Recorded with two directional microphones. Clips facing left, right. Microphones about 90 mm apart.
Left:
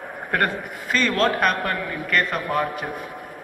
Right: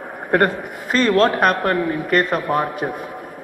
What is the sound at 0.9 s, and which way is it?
A man's voice, 35° right (ahead or behind).